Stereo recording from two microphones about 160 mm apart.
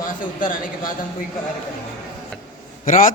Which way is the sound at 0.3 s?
55° left (ahead or behind).